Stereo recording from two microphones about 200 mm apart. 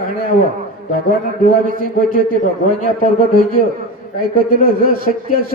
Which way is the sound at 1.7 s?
45° right (ahead or behind).